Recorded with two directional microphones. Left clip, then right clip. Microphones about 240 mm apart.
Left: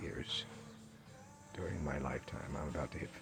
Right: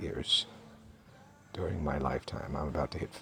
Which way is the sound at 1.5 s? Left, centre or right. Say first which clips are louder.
Right 7 dB; right.